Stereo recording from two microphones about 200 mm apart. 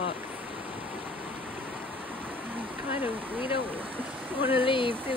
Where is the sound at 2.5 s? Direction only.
10° right (ahead or behind).